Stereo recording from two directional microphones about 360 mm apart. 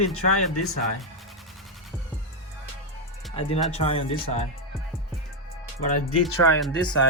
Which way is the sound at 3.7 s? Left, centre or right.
Centre.